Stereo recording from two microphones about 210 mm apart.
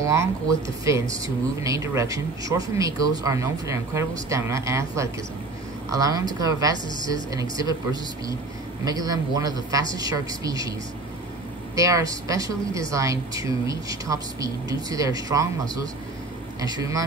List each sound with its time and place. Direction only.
0.0 s a woman's voice: 15° right (ahead or behind)
11.7 s a woman's voice: 15° right (ahead or behind)